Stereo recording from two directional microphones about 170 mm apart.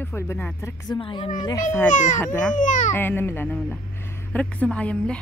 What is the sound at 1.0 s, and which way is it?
Speech, 30° left (ahead or behind).